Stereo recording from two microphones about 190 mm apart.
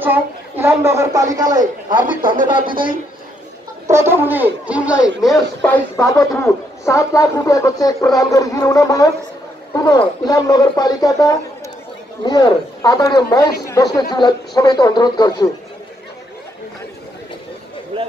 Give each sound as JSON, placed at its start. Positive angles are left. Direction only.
{"t": 0.0, "sound": "a woman's voice", "side_deg": -10}
{"t": 2.7, "sound": "a man's voice", "side_deg": -50}
{"t": 3.8, "sound": "speech", "side_deg": -15}
{"t": 5.7, "sound": "speech", "side_deg": 15}
{"t": 17.9, "sound": "a sound", "side_deg": -30}